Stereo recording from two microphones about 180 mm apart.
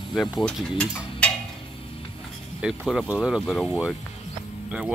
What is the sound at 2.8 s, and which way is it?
Mechanisms, 5° left (ahead or behind).